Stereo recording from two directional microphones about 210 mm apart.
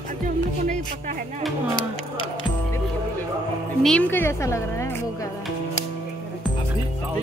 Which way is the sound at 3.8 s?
5° left (ahead or behind).